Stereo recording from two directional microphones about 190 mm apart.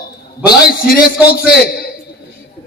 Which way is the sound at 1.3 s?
50° left (ahead or behind).